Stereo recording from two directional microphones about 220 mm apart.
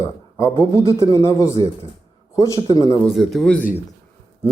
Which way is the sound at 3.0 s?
Centre (ahead or behind).